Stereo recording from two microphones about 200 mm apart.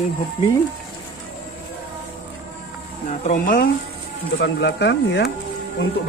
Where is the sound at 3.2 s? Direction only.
40° left (ahead or behind).